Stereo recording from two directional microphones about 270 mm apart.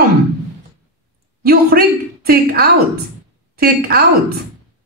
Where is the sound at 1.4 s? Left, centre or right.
Right.